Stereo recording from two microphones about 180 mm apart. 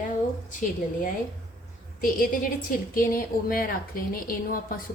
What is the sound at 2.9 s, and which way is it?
A woman's voice, 50° left (ahead or behind).